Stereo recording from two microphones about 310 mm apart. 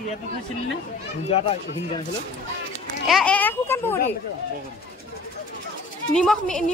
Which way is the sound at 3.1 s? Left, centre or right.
Centre.